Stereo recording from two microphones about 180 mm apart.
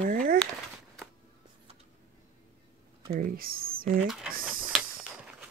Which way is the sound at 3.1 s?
55° right (ahead or behind).